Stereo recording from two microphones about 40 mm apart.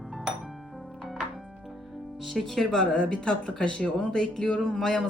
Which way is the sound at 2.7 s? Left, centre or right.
Centre.